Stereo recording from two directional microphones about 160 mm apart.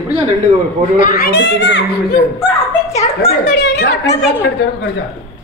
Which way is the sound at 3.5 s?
80° left.